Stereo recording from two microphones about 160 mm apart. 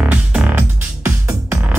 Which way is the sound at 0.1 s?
10° right (ahead or behind).